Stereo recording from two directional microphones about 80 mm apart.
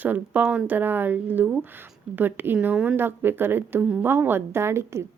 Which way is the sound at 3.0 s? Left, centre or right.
Right.